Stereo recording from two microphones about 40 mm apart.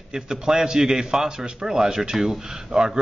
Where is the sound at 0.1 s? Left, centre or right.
Centre.